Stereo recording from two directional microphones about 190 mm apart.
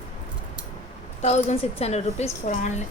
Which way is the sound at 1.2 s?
35° left (ahead or behind).